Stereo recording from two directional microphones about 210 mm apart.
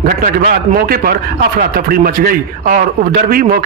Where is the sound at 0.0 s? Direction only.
45° right (ahead or behind).